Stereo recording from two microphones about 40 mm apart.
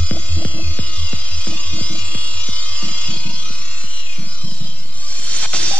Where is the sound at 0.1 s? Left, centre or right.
Left.